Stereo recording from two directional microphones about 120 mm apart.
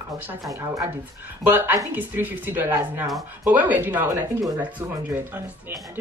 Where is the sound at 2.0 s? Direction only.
15° right (ahead or behind).